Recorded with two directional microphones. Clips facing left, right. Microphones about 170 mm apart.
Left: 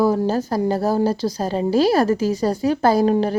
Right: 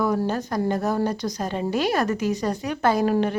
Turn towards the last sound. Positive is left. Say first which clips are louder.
# left 4 dB
turn(degrees=35)  # may be behind; listen again after turning